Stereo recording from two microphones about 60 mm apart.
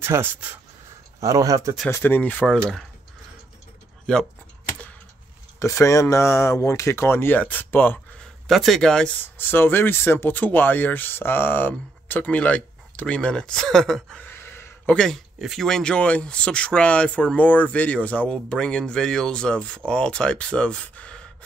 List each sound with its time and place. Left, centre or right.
0.0 s speech: right
1.2 s speech: right
2.0 s speech: left
4.0 s speech: centre
5.6 s speech: left
8.5 s speech: centre
9.2 s speech: left
10.3 s speech: left; by 14.2 s centre
14.2 s a sound: left
14.9 s speech: centre
15.3 s speech: centre
15.6 s speech: centre